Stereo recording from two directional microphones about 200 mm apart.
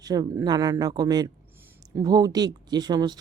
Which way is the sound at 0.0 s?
20° right (ahead or behind).